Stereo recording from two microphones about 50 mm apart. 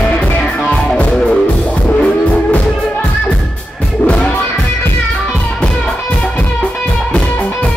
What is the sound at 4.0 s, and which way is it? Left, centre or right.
Music, left.